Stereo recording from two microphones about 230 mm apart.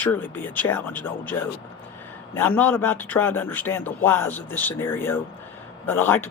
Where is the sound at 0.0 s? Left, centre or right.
Centre.